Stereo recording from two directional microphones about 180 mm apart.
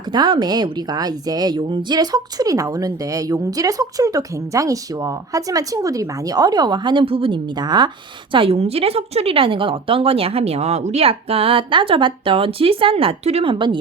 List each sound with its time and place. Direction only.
0.1 s a woman's voice: 25° right (ahead or behind)